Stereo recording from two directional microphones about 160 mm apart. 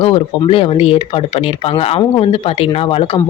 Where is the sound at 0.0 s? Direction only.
35° left (ahead or behind).